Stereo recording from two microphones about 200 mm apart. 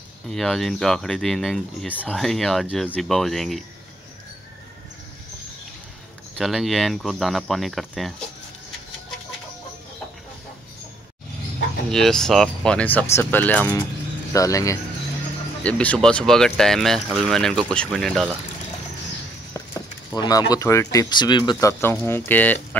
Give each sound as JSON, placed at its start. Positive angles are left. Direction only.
{"t": 0.3, "sound": "speech", "side_deg": 0}
{"t": 6.3, "sound": "speech", "side_deg": 0}
{"t": 11.9, "sound": "speech", "side_deg": 0}
{"t": 20.1, "sound": "speech", "side_deg": 20}